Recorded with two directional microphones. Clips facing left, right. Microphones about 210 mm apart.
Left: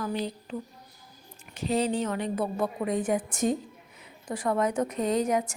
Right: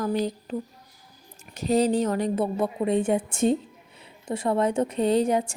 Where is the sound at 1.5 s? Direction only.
40° right (ahead or behind).